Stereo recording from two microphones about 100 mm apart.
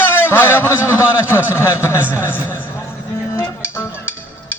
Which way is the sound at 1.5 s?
25° left (ahead or behind).